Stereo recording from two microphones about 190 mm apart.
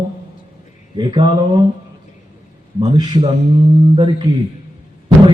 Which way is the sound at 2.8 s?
25° right (ahead or behind).